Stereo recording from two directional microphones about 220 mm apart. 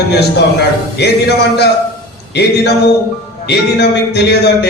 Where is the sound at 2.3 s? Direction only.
50° left (ahead or behind).